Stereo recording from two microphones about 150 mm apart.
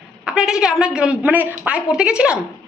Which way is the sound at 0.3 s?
5° right (ahead or behind).